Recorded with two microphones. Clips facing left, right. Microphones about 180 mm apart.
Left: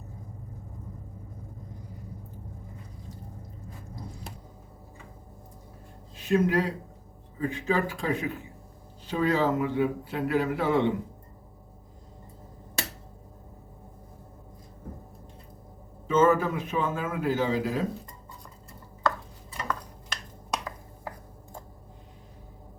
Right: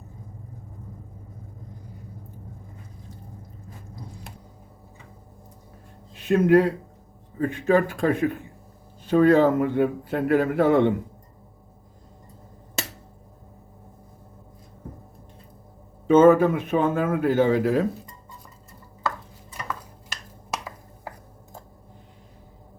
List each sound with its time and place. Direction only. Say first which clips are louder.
6.1 s a man's voice: right 7 dB; 60° right (ahead or behind)
16.0 s speech: right 7 dB; 60° right (ahead or behind)
20.5 s finger snapping: even; 5° right (ahead or behind)